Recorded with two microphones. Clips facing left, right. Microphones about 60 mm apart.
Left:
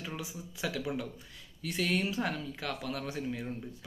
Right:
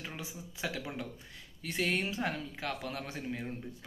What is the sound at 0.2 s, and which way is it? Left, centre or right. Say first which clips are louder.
Speech: left 2 dB; right.